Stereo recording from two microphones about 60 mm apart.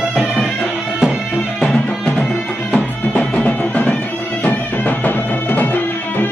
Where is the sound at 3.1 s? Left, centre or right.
Left.